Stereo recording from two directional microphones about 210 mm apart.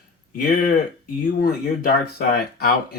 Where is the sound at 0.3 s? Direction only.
40° left (ahead or behind).